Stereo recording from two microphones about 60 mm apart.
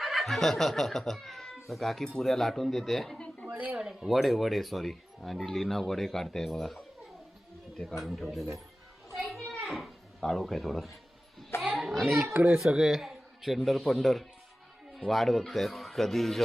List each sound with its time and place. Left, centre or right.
0.0 s speech: centre
3.2 s a sound: centre
3.8 s speech: centre
7.9 s speech: centre
9.1 s children playing: centre
9.5 s a child's voice: centre
11.6 s children playing: centre
12.3 s a child's voice: right
12.5 s speech: centre